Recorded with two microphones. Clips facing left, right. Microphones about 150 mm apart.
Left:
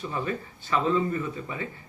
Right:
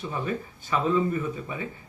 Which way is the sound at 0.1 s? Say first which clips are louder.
Right 2 dB; 5° right (ahead or behind).